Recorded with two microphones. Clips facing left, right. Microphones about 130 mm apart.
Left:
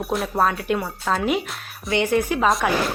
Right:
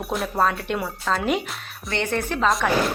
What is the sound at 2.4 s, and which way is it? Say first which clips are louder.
Speech: right 1 dB; centre (ahead or behind).